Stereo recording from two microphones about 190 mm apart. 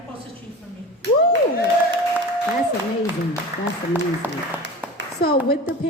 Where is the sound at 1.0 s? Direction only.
65° right (ahead or behind).